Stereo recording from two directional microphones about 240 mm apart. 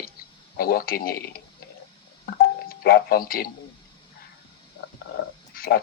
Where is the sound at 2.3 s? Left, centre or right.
Left.